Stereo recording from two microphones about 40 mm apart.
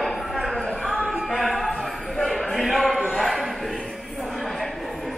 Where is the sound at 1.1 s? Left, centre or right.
Centre.